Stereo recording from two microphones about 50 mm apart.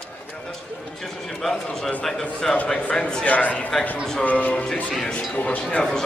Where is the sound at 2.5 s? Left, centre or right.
Left.